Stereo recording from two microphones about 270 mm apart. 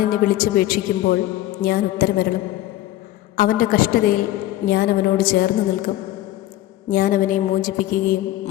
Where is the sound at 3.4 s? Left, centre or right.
Left.